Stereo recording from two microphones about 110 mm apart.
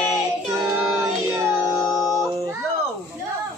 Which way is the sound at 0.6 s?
35° right (ahead or behind).